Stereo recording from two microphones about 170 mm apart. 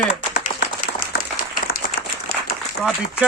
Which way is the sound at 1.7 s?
65° left (ahead or behind).